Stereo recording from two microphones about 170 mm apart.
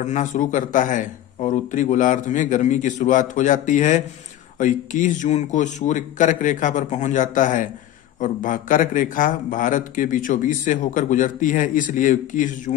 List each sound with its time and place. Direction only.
0.0 s a man's voice: 45° left (ahead or behind)